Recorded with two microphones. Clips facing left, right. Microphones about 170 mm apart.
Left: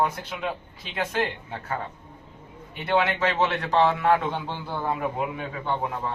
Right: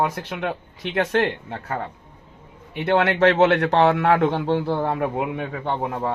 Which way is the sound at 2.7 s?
65° right (ahead or behind).